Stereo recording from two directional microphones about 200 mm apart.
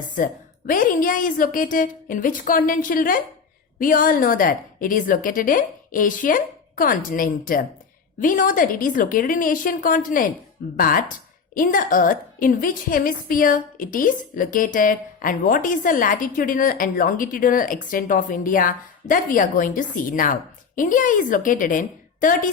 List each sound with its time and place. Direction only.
0.2 s a woman's voice: 40° left (ahead or behind)